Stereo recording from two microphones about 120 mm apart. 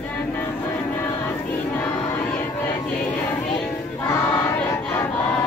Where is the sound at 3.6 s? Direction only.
15° left (ahead or behind).